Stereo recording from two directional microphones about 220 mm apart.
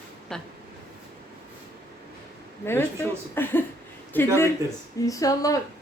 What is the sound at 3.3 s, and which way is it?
Speech, 10° left (ahead or behind).